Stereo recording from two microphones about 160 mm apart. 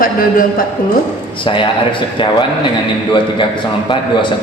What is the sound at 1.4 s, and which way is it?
Speech, 30° left (ahead or behind).